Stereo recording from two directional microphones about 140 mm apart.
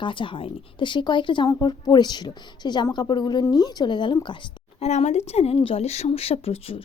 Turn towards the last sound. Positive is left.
turn(degrees=45)  # may be behind; listen again after turning